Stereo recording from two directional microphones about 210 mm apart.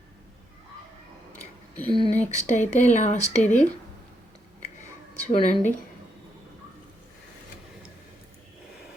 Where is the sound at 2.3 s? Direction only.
35° left (ahead or behind).